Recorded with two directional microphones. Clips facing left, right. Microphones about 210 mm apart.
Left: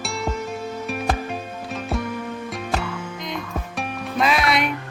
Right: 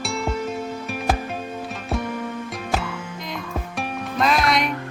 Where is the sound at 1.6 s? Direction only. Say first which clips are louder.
Left 2 dB; centre (ahead or behind).